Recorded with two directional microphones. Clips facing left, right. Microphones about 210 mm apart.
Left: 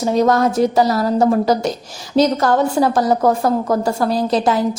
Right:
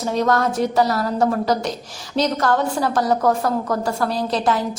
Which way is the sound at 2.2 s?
40° left (ahead or behind).